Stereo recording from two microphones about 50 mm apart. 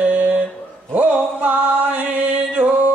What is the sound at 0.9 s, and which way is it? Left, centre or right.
Music, right.